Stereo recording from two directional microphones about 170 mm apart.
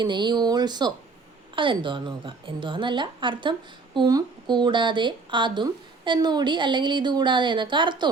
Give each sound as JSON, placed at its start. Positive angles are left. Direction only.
{"t": 0.0, "sound": "speech", "side_deg": -25}